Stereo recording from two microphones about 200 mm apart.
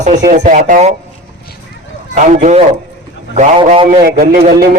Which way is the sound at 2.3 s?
35° right (ahead or behind).